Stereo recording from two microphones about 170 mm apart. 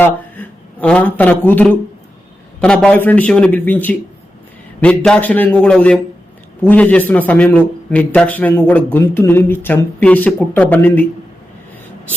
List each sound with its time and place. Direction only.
0.0 s a man's voice: 10° left (ahead or behind)